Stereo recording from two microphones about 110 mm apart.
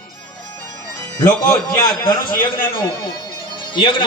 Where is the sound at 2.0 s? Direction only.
45° left (ahead or behind).